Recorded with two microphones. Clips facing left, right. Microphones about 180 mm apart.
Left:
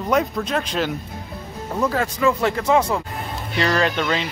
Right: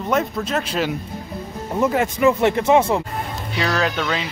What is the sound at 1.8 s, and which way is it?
Speech, 20° right (ahead or behind).